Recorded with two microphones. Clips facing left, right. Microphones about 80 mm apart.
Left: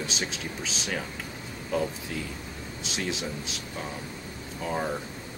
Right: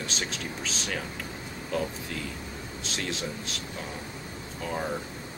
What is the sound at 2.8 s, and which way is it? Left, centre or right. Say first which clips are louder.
Speech: left 2 dB; centre.